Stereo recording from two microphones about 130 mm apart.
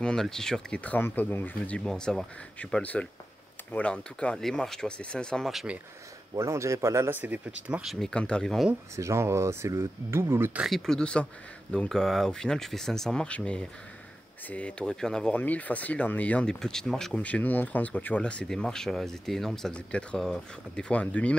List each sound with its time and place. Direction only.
0.0 s speech: 5° left (ahead or behind)
6.3 s speech: 25° right (ahead or behind); by 8.6 s 5° left (ahead or behind)
8.9 s speech: 20° right (ahead or behind)
10.6 s speech: centre (ahead or behind)